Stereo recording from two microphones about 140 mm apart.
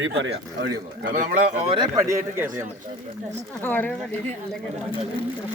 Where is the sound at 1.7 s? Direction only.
30° right (ahead or behind).